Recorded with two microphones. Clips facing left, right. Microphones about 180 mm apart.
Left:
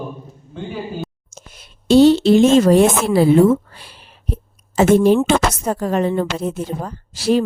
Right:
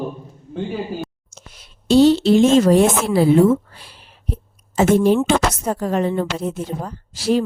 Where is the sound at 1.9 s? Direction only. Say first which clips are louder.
Left 2 dB; 60° left (ahead or behind).